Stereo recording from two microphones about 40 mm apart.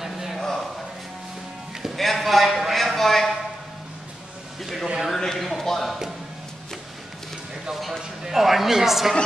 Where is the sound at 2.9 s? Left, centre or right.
Centre.